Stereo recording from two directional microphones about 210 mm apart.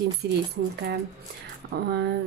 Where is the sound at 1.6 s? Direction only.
50° right (ahead or behind).